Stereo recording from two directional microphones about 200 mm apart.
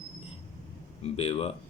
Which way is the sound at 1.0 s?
30° left (ahead or behind).